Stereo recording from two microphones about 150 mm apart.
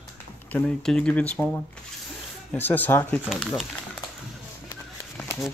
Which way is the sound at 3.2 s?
Centre (ahead or behind).